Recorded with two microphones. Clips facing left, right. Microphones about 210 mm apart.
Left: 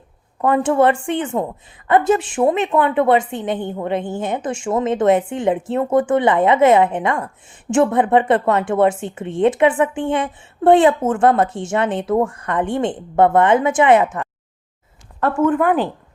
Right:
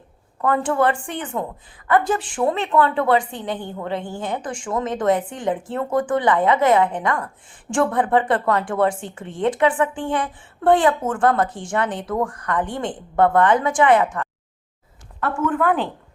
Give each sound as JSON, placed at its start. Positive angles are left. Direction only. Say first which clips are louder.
{"t": 0.4, "sound": "a woman's voice", "louder": "left 4 dB", "side_deg": 25}
{"t": 15.6, "sound": "speech", "louder": "left 3 dB", "side_deg": 10}